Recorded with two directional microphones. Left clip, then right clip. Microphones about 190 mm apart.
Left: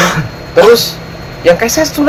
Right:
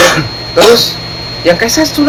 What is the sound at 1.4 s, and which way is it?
Speech, 50° left (ahead or behind).